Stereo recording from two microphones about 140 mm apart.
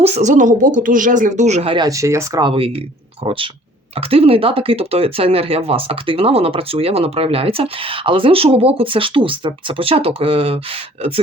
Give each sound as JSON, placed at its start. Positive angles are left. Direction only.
{"t": 0.0, "sound": "speech", "side_deg": -55}
{"t": 1.7, "sound": "speech", "side_deg": -25}
{"t": 2.4, "sound": "speech", "side_deg": -40}